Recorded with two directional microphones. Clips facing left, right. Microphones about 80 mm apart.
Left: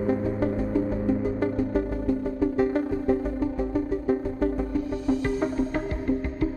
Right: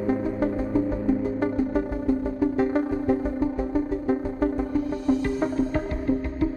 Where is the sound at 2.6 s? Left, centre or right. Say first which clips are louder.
Even; right.